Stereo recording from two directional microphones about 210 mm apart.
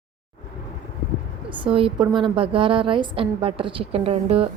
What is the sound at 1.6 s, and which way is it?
A woman's voice, 25° right (ahead or behind).